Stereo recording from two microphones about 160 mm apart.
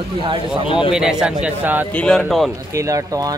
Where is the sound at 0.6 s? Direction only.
35° left (ahead or behind).